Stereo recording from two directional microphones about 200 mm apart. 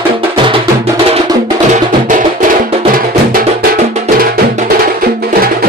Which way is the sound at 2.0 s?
40° right (ahead or behind).